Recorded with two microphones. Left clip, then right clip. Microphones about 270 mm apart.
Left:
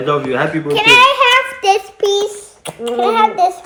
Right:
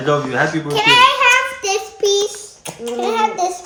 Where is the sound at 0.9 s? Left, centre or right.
Centre.